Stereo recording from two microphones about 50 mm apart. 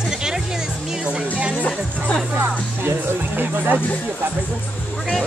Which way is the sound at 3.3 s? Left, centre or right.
Right.